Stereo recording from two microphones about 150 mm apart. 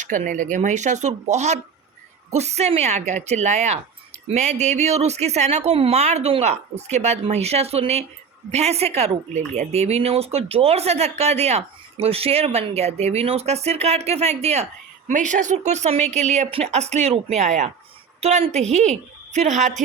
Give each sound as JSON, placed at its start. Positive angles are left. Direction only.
{"t": 0.0, "sound": "speech", "side_deg": -55}